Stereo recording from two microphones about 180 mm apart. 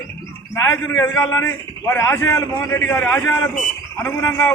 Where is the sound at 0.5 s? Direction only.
15° left (ahead or behind).